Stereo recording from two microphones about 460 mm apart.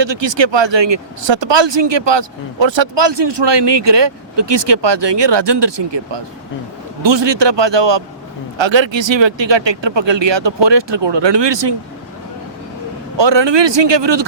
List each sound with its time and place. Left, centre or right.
0.0 s speech: right
13.1 s speech: right